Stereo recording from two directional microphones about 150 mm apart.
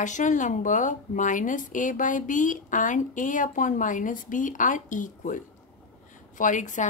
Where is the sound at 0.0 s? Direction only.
55° left (ahead or behind).